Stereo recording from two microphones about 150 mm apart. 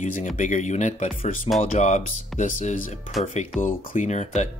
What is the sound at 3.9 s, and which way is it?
Speech, 50° left (ahead or behind).